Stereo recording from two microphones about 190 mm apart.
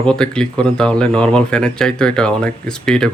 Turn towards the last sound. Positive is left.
turn(degrees=5)  # may be behind; listen again after turning